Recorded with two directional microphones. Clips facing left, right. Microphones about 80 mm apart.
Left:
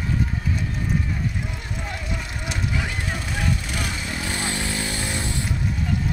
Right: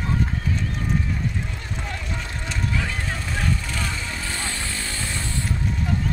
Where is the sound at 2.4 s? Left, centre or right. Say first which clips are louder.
Right 1 dB; centre.